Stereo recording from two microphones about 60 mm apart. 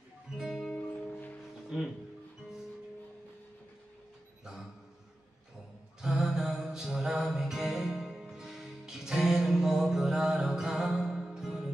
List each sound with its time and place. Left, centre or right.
0.3 s music: centre
0.7 s music: left
5.9 s music: centre